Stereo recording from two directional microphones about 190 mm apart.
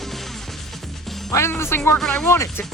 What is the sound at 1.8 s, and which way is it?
Music, centre (ahead or behind).